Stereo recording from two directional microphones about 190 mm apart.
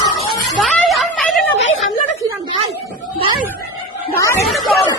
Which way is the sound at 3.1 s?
25° right (ahead or behind).